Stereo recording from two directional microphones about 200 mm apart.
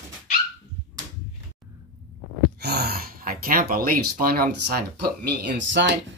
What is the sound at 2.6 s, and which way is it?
Speech, 55° right (ahead or behind).